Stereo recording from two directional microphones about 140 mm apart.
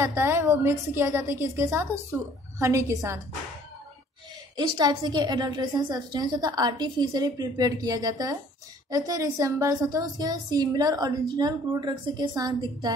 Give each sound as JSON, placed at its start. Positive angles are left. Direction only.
{"t": 0.0, "sound": "a woman's voice", "side_deg": -20}
{"t": 4.6, "sound": "a woman's voice", "side_deg": -30}